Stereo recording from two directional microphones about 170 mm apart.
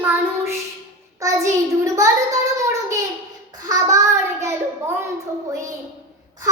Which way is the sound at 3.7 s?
20° right (ahead or behind).